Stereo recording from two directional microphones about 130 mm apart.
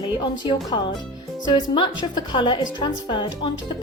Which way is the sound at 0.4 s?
40° left (ahead or behind).